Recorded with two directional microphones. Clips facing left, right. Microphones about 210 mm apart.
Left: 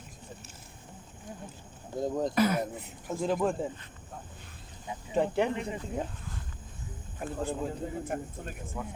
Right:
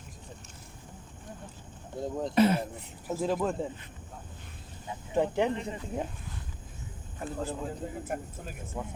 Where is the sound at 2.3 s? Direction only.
25° right (ahead or behind).